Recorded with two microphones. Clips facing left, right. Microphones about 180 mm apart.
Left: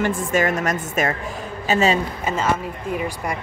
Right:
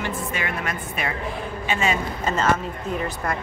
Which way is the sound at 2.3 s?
10° left (ahead or behind).